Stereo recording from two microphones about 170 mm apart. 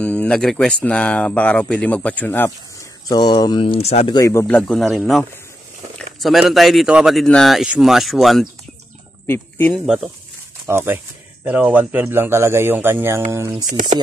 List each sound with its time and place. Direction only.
0.0 s speech: 5° left (ahead or behind)
3.1 s speech: 25° left (ahead or behind)
4.1 s speech: 20° left (ahead or behind)
4.6 s speech: 5° left (ahead or behind)
9.3 s speech: 10° left (ahead or behind)
10.7 s speech: 15° right (ahead or behind)
13.7 s speech: 45° right (ahead or behind)